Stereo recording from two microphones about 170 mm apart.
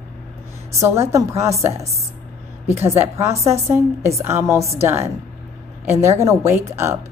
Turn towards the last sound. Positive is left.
turn(degrees=-15)  # may be behind; listen again after turning